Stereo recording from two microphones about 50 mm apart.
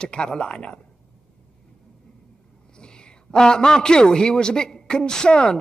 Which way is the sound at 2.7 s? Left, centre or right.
Centre.